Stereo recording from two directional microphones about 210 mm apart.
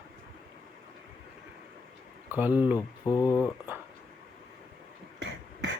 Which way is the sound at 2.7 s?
15° left (ahead or behind).